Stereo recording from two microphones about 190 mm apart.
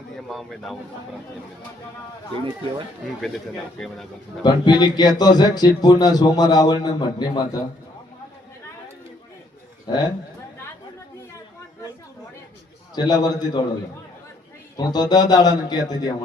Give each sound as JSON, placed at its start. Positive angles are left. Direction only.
{"t": 0.3, "sound": "speech", "side_deg": 0}
{"t": 3.2, "sound": "speech", "side_deg": 0}
{"t": 4.4, "sound": "speech", "side_deg": 20}
{"t": 9.8, "sound": "a man's voice", "side_deg": 25}
{"t": 13.0, "sound": "speech", "side_deg": 20}
{"t": 14.8, "sound": "speech", "side_deg": 20}